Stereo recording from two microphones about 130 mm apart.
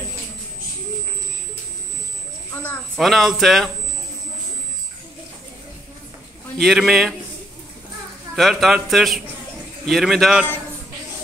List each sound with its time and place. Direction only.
2.5 s speech: 15° left (ahead or behind)
3.0 s a man's voice: centre (ahead or behind)
6.6 s a man's voice: centre (ahead or behind)
8.4 s a man's voice: centre (ahead or behind)